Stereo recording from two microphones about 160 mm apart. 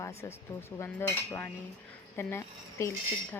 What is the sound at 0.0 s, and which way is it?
Cutlery, 15° left (ahead or behind).